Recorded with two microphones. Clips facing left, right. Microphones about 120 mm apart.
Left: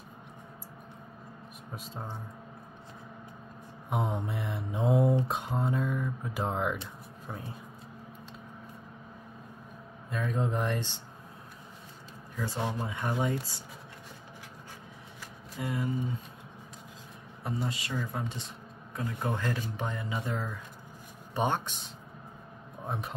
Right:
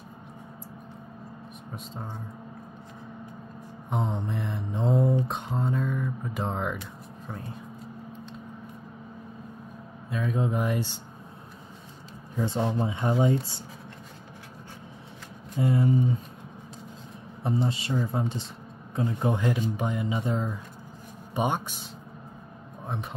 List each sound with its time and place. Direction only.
3.9 s speech: 5° left (ahead or behind)
10.0 s speech: centre (ahead or behind)
12.4 s speech: 25° right (ahead or behind)
15.5 s speech: 30° right (ahead or behind)
17.4 s speech: 25° right (ahead or behind); by 21.8 s 10° right (ahead or behind)